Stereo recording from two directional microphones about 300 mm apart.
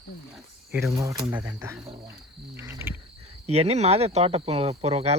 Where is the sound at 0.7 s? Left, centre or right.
Centre.